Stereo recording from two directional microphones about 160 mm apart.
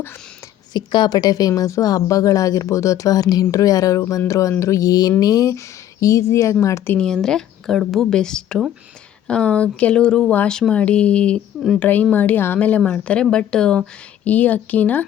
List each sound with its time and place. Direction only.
0.7 s a woman's voice: 30° left (ahead or behind)
6.9 s a woman's voice: 5° left (ahead or behind)